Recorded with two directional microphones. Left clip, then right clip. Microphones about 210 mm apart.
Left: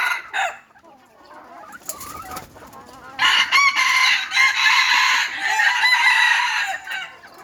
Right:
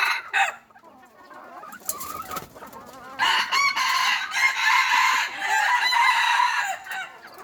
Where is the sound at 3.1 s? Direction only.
5° right (ahead or behind).